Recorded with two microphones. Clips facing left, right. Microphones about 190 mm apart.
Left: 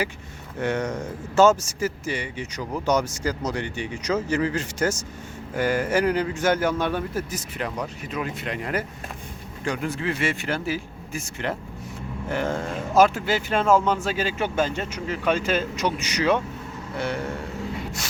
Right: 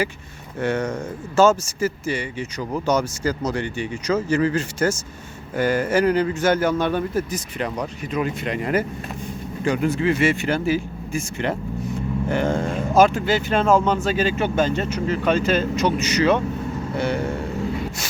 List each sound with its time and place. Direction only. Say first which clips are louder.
0.6 s speech: right 2 dB; 15° left (ahead or behind)